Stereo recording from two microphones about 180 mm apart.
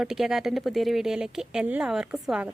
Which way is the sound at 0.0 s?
Centre (ahead or behind).